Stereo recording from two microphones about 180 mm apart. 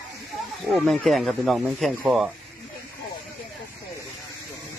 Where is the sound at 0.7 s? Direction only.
Centre (ahead or behind).